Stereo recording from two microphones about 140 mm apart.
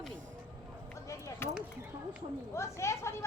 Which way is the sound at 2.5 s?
20° left (ahead or behind).